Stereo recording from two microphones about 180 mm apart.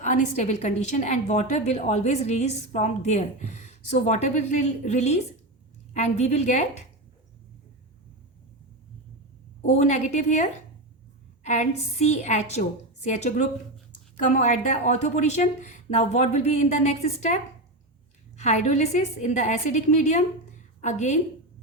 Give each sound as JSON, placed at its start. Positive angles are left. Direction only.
{"t": 0.0, "sound": "a woman's voice", "side_deg": 45}
{"t": 9.7, "sound": "a woman's voice", "side_deg": 40}
{"t": 11.4, "sound": "a woman's voice", "side_deg": 40}